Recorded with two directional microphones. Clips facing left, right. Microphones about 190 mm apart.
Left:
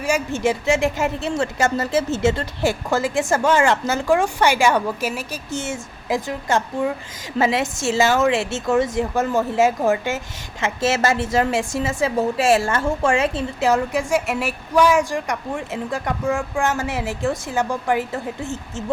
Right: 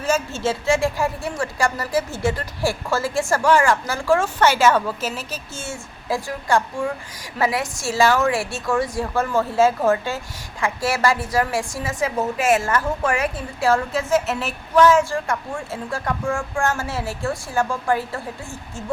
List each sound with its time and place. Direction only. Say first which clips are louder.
0.0 s a woman's voice: left 1 dB; 15° left (ahead or behind)